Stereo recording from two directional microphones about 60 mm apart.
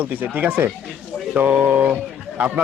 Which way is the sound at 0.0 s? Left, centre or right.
Right.